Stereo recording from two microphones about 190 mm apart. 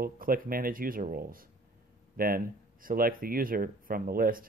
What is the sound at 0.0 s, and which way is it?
Speech, 50° right (ahead or behind).